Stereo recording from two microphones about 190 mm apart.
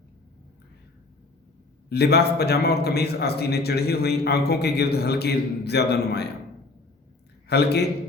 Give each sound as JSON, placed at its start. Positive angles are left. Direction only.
{"t": 1.9, "sound": "a man's voice", "side_deg": 60}
{"t": 7.4, "sound": "a man's voice", "side_deg": 60}